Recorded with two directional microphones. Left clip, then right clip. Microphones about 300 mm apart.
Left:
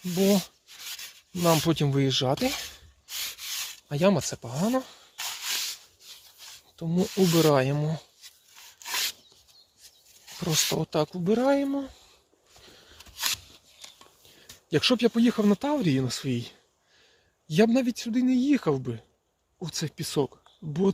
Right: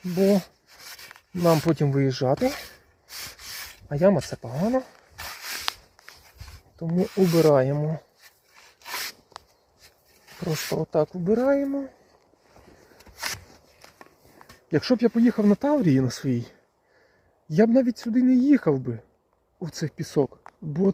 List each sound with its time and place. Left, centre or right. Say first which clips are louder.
0.0 s speech: right 3 dB; centre
1.4 s speech: right 2 dB; centre
3.1 s a sound: left 4 dB; centre
5.1 s a sound: left 3 dB; centre
6.7 s speech: right 2 dB; centre
8.2 s rub: left 3 dB; right
8.8 s rub: left 3 dB; centre
10.4 s speech: left 1 dB; centre
14.7 s speech: right 1 dB; centre